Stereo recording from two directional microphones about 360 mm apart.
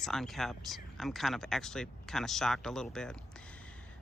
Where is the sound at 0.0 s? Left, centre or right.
Centre.